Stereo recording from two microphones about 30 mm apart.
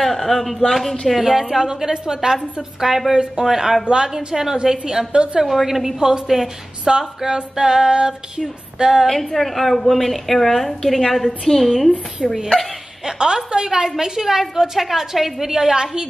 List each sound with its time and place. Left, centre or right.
0.0 s speech: centre
1.6 s female singing: centre
2.9 s a woman's voice: centre
4.6 s female singing: centre
5.1 s a woman's voice: right
5.4 s a woman's voice: centre
5.9 s female singing: right
6.2 s a woman's voice: centre
6.9 s female singing: centre
9.0 s a woman's voice: centre
12.2 s female singing: right
13.9 s a woman's voice: centre
15.4 s female singing: centre